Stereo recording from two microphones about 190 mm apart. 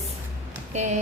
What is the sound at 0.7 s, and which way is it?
Speech, 40° right (ahead or behind).